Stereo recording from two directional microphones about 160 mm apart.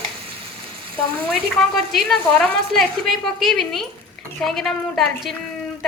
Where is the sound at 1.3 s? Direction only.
Centre (ahead or behind).